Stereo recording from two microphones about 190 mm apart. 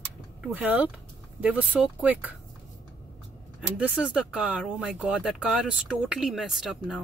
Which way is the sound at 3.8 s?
5° right (ahead or behind).